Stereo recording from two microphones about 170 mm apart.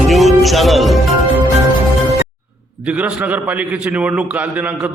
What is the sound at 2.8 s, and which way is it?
A man's voice, 10° right (ahead or behind).